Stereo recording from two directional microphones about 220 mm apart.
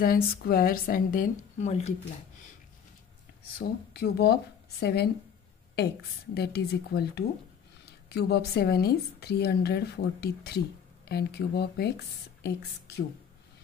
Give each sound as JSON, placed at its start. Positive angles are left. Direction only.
{"t": 0.0, "sound": "a woman's voice", "side_deg": 40}
{"t": 3.5, "sound": "speech", "side_deg": 45}
{"t": 6.3, "sound": "speech", "side_deg": 45}